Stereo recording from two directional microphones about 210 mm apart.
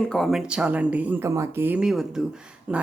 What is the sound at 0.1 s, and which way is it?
Speech, centre (ahead or behind).